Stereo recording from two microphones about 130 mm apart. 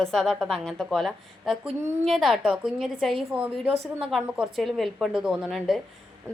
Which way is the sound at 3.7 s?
50° right (ahead or behind).